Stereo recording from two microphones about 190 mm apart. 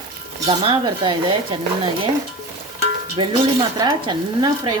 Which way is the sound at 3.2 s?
25° right (ahead or behind).